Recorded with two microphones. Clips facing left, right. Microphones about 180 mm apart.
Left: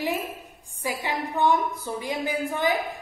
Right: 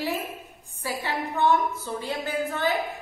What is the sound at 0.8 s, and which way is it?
A woman's voice, 15° left (ahead or behind).